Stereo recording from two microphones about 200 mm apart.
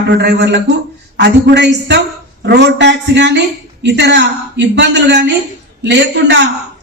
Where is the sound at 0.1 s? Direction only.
55° right (ahead or behind).